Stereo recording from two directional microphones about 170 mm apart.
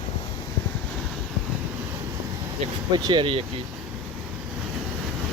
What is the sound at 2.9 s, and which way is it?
Speech, 25° right (ahead or behind).